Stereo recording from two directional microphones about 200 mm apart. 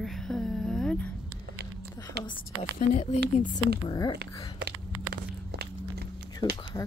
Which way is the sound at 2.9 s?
35° left (ahead or behind).